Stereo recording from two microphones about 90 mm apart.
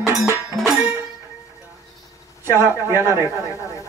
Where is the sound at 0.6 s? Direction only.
5° left (ahead or behind).